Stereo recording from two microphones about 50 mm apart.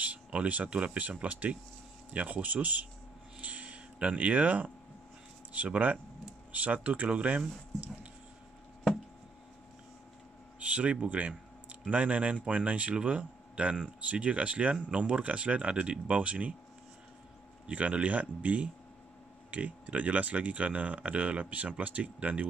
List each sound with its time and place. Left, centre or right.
0.0 s speech: right
3.3 s a sound: right
5.5 s speech: right
10.6 s a sound: right
11.9 s speech: right
17.6 s speech: right